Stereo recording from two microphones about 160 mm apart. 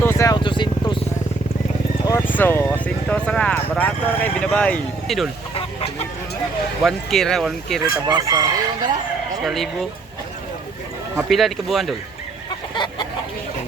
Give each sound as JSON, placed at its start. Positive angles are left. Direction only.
{"t": 0.0, "sound": "vehicle", "side_deg": 15}
{"t": 0.3, "sound": "vehicle", "side_deg": 30}
{"t": 2.0, "sound": "speech", "side_deg": 15}
{"t": 6.8, "sound": "speech", "side_deg": 0}
{"t": 7.9, "sound": "chicken", "side_deg": -20}
{"t": 9.4, "sound": "speech", "side_deg": 0}
{"t": 11.2, "sound": "speech", "side_deg": 0}
{"t": 12.7, "sound": "chicken", "side_deg": 30}